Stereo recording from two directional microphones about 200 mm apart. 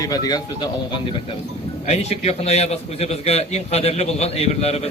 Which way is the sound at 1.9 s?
30° left (ahead or behind).